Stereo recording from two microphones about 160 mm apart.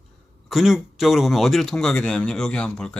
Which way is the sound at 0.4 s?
Centre (ahead or behind).